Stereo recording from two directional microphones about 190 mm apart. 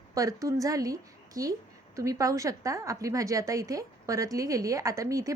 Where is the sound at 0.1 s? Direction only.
15° right (ahead or behind).